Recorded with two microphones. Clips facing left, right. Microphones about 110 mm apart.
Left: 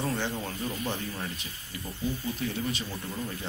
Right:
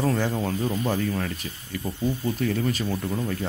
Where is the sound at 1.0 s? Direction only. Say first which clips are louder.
Right 9 dB; 65° right (ahead or behind).